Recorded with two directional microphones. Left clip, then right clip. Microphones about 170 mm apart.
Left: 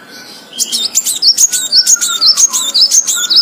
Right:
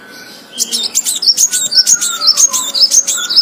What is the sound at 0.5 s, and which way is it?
Chirp, 10° left (ahead or behind).